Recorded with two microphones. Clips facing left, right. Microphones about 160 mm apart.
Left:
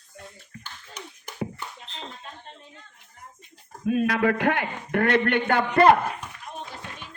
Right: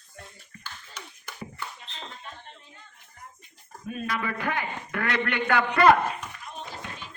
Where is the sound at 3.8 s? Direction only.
70° left (ahead or behind); by 5.6 s 50° left (ahead or behind).